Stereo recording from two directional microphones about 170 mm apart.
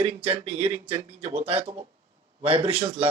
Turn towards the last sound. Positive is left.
turn(degrees=-35)  # may be behind; listen again after turning